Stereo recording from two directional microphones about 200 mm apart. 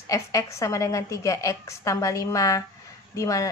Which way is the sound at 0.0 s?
15° left (ahead or behind).